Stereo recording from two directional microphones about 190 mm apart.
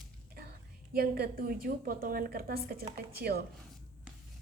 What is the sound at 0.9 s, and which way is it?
A woman's voice, 55° right (ahead or behind).